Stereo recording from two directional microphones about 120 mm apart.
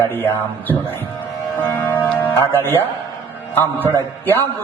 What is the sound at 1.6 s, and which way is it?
Music, 15° left (ahead or behind).